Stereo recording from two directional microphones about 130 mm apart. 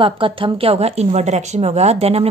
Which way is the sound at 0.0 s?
40° right (ahead or behind).